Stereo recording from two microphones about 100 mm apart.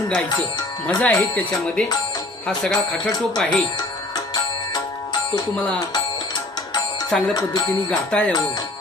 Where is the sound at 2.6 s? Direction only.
5° left (ahead or behind).